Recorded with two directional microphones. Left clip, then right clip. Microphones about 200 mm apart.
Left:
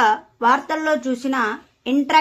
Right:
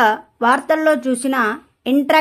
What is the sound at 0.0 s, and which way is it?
Speech, 45° right (ahead or behind).